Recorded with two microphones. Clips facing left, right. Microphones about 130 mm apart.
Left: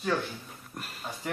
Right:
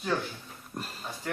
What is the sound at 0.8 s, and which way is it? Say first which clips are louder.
Speech: right 3 dB; 30° right (ahead or behind).